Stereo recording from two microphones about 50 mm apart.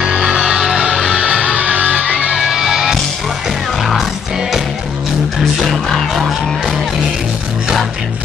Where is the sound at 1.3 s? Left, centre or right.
Centre.